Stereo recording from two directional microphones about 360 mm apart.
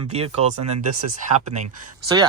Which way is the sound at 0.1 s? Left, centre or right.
Centre.